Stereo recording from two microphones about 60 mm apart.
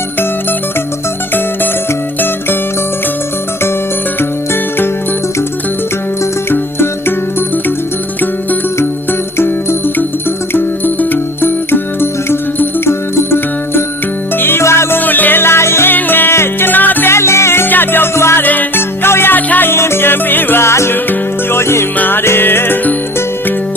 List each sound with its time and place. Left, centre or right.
9.4 s music: left
14.6 s music: left
14.9 s music: left
17.1 s music: left
18.4 s music: left
18.8 s music: left
19.7 s music: left
20.9 s music: left
21.6 s music: left
21.9 s music: left